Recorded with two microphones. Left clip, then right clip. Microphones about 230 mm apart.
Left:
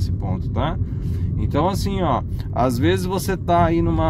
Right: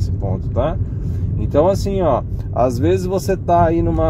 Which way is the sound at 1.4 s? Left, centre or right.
Left.